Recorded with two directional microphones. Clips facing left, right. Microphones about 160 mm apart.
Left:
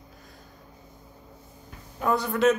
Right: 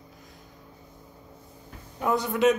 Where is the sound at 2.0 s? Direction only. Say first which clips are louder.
Even; 20° right (ahead or behind).